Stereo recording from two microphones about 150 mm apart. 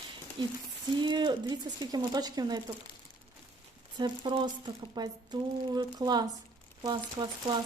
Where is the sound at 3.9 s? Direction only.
30° right (ahead or behind).